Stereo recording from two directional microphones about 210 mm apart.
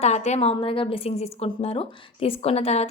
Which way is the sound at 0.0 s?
30° left (ahead or behind).